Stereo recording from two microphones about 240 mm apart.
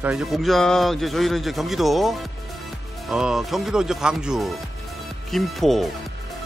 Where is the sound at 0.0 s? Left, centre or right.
Centre.